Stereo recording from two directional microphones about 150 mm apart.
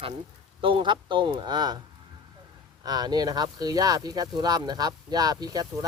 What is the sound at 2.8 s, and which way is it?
Speech, 25° right (ahead or behind).